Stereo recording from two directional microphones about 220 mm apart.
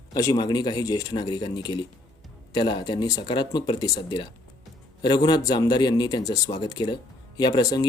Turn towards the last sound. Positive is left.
turn(degrees=15)  # may be behind; listen again after turning